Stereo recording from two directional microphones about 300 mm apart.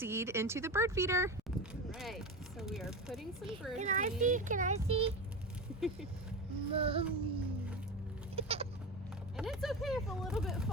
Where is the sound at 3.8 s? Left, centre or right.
Right.